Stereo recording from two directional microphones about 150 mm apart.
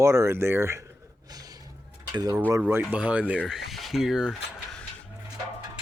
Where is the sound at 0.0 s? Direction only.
20° right (ahead or behind).